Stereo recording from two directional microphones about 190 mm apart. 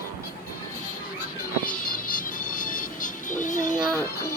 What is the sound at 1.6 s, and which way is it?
Music, 45° left (ahead or behind).